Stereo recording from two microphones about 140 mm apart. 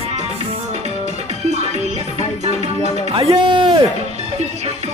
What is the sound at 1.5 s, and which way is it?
Music, 55° right (ahead or behind).